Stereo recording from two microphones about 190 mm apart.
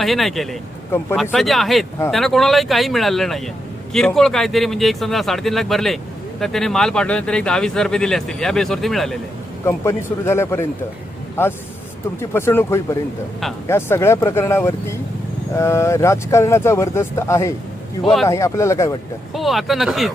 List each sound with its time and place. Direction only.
0.0 s speech: centre (ahead or behind)
9.6 s speech: 15° left (ahead or behind)
18.0 s speech: centre (ahead or behind)
18.3 s speech: 15° left (ahead or behind)
19.3 s speech: centre (ahead or behind)